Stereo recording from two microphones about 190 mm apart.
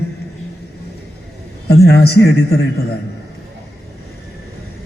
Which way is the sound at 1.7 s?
60° left (ahead or behind).